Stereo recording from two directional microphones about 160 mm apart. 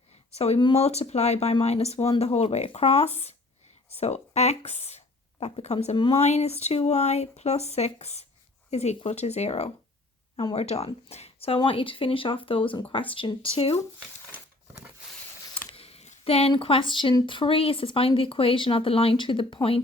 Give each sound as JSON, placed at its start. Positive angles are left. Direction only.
{"t": 0.3, "sound": "speech", "side_deg": 40}
{"t": 15.7, "sound": "speech", "side_deg": 40}